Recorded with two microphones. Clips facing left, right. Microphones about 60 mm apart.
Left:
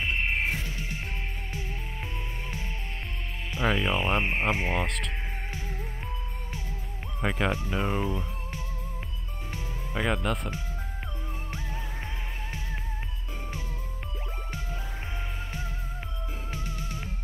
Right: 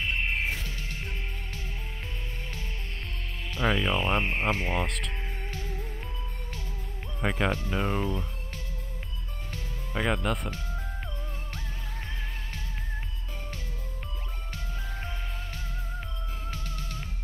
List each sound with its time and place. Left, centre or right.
0.0 s music: centre
3.5 s speech: centre
4.8 s speech: centre
7.2 s speech: centre
9.9 s speech: centre
16.4 s music: centre